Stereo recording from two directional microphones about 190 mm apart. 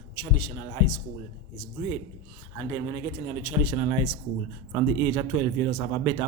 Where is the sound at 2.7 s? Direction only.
20° right (ahead or behind).